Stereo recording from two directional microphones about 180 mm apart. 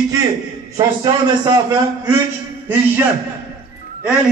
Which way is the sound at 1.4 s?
20° right (ahead or behind).